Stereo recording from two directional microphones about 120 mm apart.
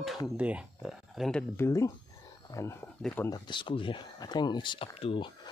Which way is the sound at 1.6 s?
25° left (ahead or behind).